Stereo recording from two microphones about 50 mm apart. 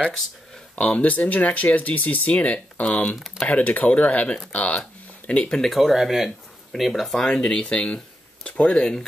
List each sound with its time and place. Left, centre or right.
0.7 s speech: left
5.5 s speech: centre
5.8 s speech: centre